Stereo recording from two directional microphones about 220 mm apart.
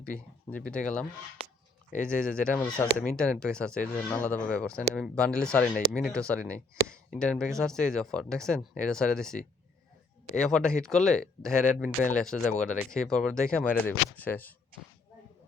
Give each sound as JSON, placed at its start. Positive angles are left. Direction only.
{"t": 0.5, "sound": "speech", "side_deg": 5}